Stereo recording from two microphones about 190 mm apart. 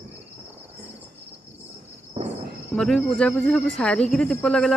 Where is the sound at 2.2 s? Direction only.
30° right (ahead or behind).